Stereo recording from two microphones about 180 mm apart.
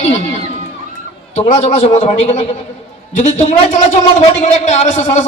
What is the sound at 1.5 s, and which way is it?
Speech, 40° left (ahead or behind).